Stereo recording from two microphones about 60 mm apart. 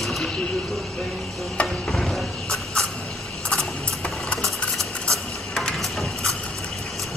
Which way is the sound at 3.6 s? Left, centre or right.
Centre.